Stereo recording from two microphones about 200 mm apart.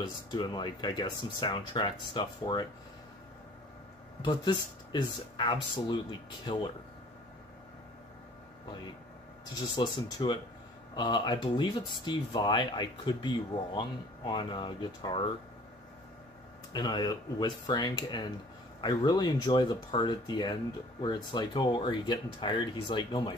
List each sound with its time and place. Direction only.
0.0 s speech: 20° left (ahead or behind)
4.2 s speech: 20° left (ahead or behind)
9.8 s speech: 20° left (ahead or behind)
16.7 s speech: 20° left (ahead or behind)